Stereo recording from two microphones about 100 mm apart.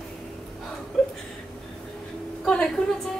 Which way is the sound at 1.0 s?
5° left (ahead or behind).